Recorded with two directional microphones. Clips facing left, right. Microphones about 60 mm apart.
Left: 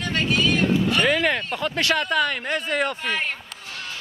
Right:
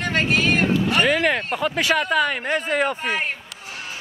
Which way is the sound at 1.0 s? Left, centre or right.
Centre.